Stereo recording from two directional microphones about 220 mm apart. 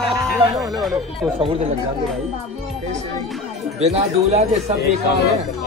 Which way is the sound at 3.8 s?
30° right (ahead or behind).